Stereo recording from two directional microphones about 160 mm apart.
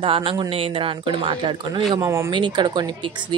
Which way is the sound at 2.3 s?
30° right (ahead or behind).